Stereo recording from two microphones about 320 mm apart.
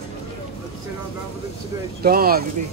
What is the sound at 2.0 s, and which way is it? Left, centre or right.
Speech, right.